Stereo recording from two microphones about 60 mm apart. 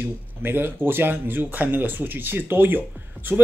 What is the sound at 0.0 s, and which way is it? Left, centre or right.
Speech, right.